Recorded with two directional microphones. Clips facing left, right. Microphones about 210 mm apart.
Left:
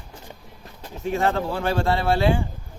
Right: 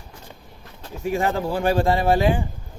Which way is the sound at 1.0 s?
10° right (ahead or behind).